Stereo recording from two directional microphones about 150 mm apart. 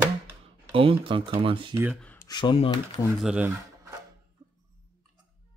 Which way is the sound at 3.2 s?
5° right (ahead or behind).